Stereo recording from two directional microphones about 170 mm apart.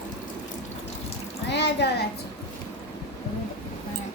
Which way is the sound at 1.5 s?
90° left.